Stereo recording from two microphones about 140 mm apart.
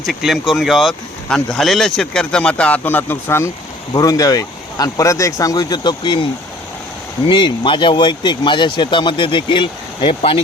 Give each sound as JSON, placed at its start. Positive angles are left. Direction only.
{"t": 0.0, "sound": "speech", "side_deg": 0}
{"t": 7.3, "sound": "speech", "side_deg": 35}